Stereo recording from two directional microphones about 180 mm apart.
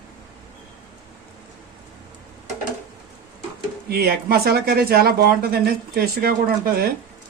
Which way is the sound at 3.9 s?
60° right (ahead or behind).